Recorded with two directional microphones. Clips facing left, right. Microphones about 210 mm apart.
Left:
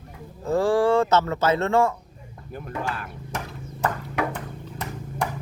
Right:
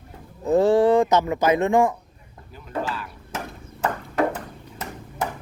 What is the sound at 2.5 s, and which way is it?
Speech, 55° left (ahead or behind).